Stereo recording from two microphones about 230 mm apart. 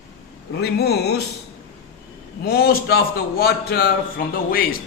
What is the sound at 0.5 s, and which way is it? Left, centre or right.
Speech, left.